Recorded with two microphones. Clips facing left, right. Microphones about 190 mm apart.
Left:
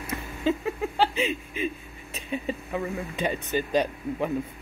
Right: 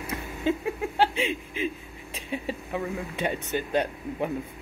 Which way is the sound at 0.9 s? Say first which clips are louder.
Right 1 dB; 65° right (ahead or behind).